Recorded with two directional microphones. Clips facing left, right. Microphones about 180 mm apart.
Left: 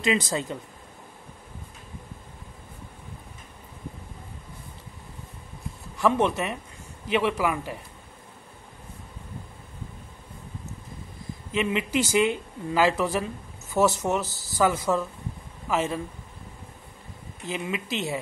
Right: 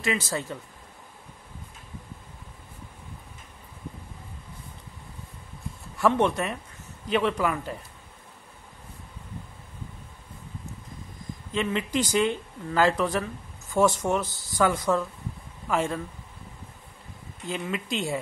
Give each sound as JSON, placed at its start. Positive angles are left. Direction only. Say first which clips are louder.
{"t": 0.0, "sound": "speech", "louder": "left 3 dB", "side_deg": 20}
{"t": 5.9, "sound": "speech", "louder": "even", "side_deg": 0}
{"t": 11.5, "sound": "speech", "louder": "left 1 dB", "side_deg": 10}
{"t": 17.5, "sound": "speech", "louder": "even", "side_deg": 5}